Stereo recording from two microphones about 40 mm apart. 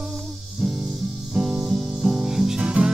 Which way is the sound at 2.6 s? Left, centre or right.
Right.